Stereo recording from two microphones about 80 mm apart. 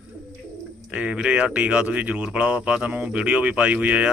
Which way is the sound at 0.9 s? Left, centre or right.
Centre.